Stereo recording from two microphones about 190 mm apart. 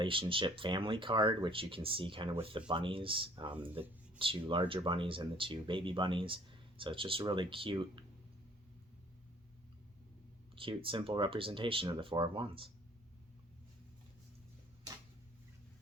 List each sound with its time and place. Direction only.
0.0 s speech: 25° right (ahead or behind)
10.5 s speech: 25° right (ahead or behind)